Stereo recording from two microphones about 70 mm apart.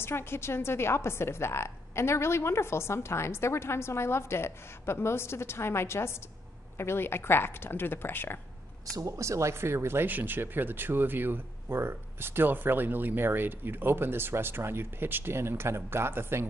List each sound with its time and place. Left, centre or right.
0.0 s a woman's voice: left
8.9 s speech: right